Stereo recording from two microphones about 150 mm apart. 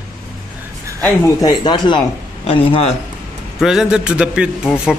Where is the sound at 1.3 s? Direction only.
30° left (ahead or behind).